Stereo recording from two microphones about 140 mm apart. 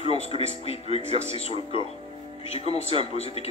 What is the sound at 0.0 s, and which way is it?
Speech, 45° left (ahead or behind).